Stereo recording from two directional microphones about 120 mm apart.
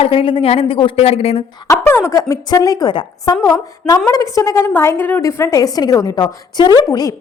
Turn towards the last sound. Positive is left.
turn(degrees=35)  # may be behind; listen again after turning